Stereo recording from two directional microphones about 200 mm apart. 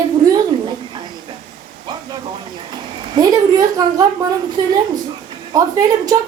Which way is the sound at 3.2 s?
20° right (ahead or behind).